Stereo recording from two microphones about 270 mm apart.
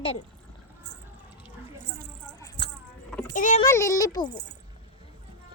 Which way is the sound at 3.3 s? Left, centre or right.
Left.